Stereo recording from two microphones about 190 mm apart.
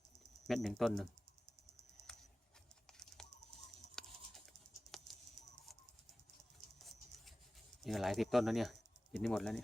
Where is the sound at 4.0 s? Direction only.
Centre (ahead or behind).